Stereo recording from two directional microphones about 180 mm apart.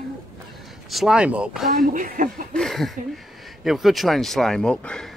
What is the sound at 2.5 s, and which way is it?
Speech, centre (ahead or behind).